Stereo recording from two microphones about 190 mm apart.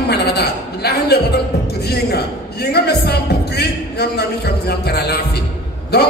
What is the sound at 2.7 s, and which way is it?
Speech, 55° left (ahead or behind).